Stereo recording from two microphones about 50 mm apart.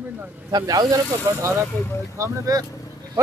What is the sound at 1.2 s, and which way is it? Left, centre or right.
Speech, right.